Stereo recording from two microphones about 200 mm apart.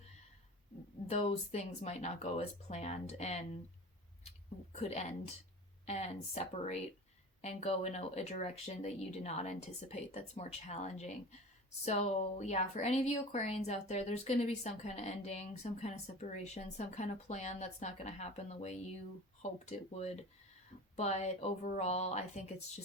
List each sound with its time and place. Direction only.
1.1 s speech: 30° left (ahead or behind)
4.7 s speech: 35° left (ahead or behind)